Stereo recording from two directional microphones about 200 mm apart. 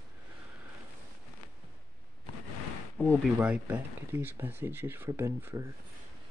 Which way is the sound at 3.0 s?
5° right (ahead or behind).